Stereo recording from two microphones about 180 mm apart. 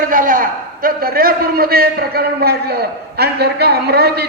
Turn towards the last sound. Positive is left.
turn(degrees=-60)  # may be behind; listen again after turning